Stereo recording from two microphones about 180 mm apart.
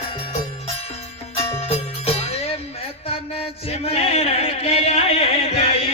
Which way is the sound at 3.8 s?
35° left (ahead or behind).